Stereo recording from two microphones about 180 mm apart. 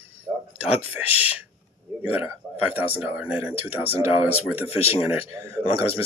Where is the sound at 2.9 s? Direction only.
10° right (ahead or behind).